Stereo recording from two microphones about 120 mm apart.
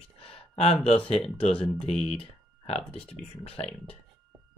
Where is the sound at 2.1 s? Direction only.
55° left (ahead or behind).